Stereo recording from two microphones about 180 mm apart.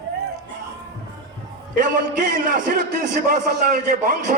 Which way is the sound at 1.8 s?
45° right (ahead or behind).